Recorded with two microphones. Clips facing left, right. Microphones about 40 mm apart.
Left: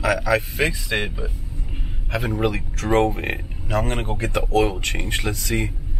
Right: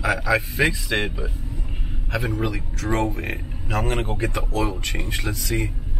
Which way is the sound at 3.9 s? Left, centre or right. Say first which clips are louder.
Right 1 dB; centre.